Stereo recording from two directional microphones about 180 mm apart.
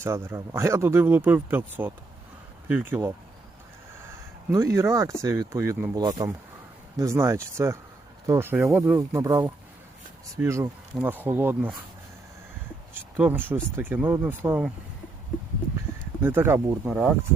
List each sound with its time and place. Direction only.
0.0 s speech: 15° right (ahead or behind)
4.1 s speech: 15° right (ahead or behind)
13.1 s speech: 10° right (ahead or behind)
16.2 s speech: 15° right (ahead or behind)